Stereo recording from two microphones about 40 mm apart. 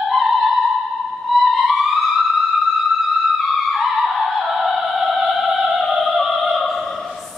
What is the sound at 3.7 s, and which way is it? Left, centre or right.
Opera, centre.